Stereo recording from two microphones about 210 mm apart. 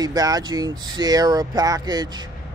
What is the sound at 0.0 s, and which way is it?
Speech, 20° right (ahead or behind).